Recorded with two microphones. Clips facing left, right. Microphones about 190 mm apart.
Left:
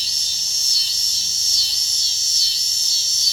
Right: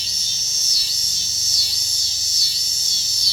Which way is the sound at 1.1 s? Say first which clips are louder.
Right 2 dB; 30° left (ahead or behind).